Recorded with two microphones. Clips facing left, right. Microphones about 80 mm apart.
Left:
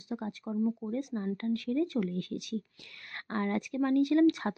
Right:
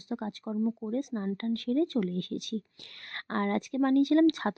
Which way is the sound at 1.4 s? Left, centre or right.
Right.